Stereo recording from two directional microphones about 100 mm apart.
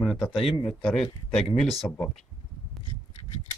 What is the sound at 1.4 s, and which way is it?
Speech, 75° left (ahead or behind).